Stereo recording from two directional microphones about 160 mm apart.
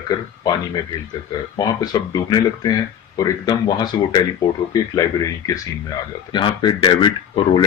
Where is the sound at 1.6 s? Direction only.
25° left (ahead or behind).